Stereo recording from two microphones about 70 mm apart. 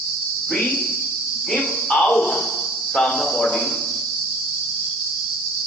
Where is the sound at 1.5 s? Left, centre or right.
Centre.